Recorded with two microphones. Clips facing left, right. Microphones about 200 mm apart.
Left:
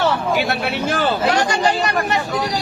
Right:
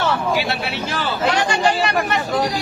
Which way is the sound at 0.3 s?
50° left (ahead or behind).